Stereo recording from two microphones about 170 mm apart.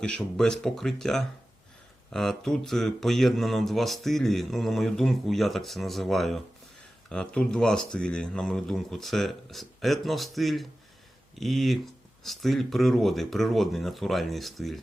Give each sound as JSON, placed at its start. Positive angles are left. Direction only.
{"t": 0.0, "sound": "speech", "side_deg": 5}